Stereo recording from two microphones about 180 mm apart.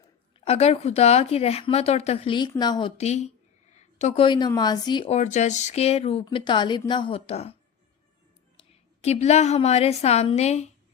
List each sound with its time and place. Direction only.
0.3 s speech: 35° left (ahead or behind)
3.0 s speech: 35° left (ahead or behind)
5.1 s speech: 40° left (ahead or behind)
8.5 s a woman's voice: 35° left (ahead or behind)